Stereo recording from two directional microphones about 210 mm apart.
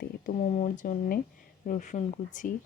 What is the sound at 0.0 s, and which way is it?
Speech, 40° left (ahead or behind).